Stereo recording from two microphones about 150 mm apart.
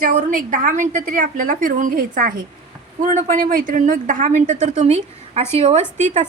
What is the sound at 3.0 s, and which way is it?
A woman's voice, 55° right (ahead or behind).